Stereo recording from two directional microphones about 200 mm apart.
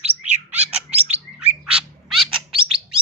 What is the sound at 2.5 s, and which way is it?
Bird, 25° right (ahead or behind).